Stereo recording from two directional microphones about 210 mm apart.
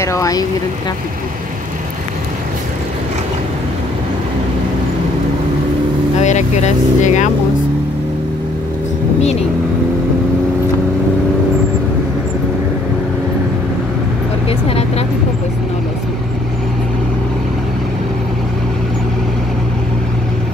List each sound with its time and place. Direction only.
0.0 s speech: 15° left (ahead or behind)
6.1 s speech: 35° left (ahead or behind)
14.7 s speech: 30° left (ahead or behind)